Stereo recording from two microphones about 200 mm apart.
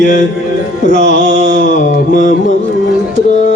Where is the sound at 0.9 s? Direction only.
60° right (ahead or behind).